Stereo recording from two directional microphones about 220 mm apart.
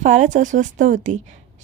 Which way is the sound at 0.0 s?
35° right (ahead or behind).